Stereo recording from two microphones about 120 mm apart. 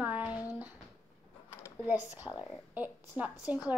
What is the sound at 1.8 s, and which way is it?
A woman's voice, 15° right (ahead or behind).